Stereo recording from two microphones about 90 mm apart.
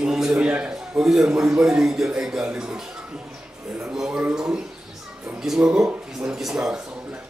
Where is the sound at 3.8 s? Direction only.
5° right (ahead or behind).